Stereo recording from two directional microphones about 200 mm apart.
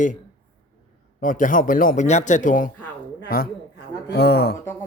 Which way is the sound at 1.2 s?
40° left (ahead or behind).